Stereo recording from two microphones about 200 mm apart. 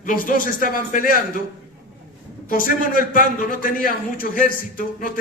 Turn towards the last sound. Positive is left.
turn(degrees=45)  # may be behind; listen again after turning